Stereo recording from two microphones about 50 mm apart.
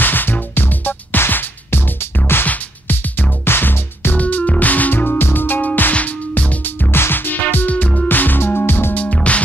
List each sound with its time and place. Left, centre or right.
0.0 s music: left
2.4 s music: left
4.2 s music: left
4.9 s music: left
5.9 s music: left
6.6 s music: left
7.7 s music: left
8.1 s music: left
8.9 s music: left